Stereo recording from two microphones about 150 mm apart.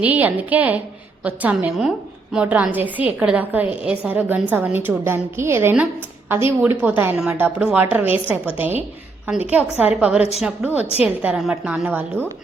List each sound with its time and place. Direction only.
0.0 s a woman's voice: 10° right (ahead or behind)